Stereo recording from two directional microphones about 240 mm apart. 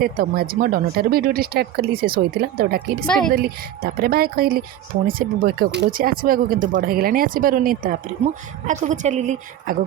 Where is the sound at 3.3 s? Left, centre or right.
Right.